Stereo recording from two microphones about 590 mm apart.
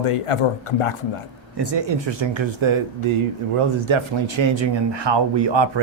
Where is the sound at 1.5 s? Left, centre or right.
Right.